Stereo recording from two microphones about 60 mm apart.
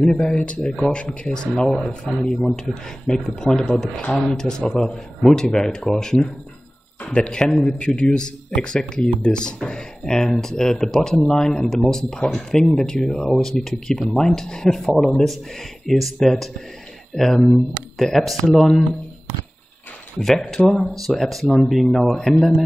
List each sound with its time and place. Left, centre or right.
0.0 s speech: centre
0.4 s speech: left
20.2 s speech: centre
20.8 s speech: centre